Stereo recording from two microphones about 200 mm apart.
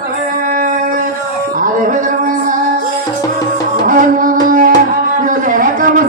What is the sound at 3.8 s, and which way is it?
Music, 40° right (ahead or behind).